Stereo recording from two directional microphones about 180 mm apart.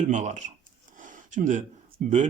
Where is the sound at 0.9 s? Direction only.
45° right (ahead or behind).